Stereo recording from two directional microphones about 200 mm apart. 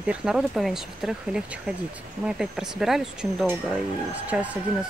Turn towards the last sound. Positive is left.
turn(degrees=-5)  # may be behind; listen again after turning